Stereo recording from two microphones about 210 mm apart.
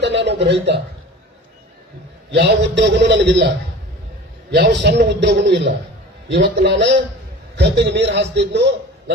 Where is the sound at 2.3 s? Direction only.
55° right (ahead or behind).